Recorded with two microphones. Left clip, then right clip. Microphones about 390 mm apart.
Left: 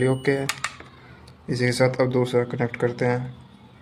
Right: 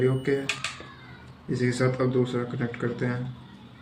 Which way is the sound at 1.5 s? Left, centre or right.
Left.